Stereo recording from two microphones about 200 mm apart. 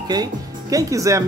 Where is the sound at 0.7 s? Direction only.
15° right (ahead or behind).